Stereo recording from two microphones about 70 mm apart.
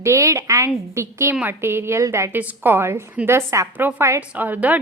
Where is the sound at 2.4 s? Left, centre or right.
Right.